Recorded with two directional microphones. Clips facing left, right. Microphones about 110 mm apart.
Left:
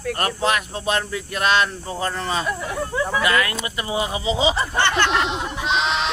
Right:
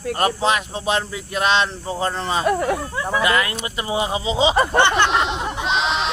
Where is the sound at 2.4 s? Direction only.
55° right (ahead or behind).